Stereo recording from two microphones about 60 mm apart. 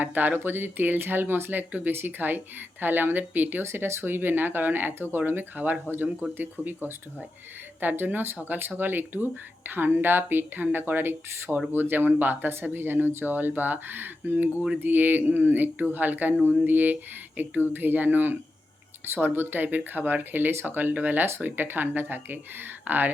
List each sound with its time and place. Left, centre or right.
0.0 s speech: right
3.6 s speech: right